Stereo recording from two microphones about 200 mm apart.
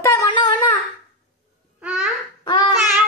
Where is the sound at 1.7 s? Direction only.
5° right (ahead or behind).